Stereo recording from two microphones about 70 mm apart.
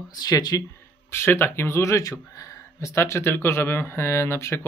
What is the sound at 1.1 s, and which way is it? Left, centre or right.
Speech, left.